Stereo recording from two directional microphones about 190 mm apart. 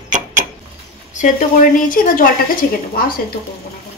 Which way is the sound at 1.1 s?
45° left (ahead or behind).